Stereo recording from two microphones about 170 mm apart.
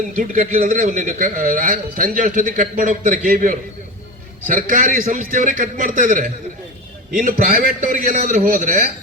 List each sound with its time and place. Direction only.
0.2 s a man's voice: 55° right (ahead or behind)